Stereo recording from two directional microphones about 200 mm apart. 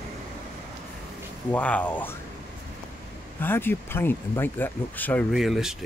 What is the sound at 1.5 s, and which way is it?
Speech, 5° left (ahead or behind).